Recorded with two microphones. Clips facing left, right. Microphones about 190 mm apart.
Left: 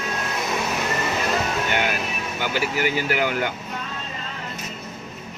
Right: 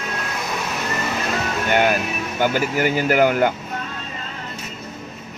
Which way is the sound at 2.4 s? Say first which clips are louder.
Right 5 dB; 45° right (ahead or behind).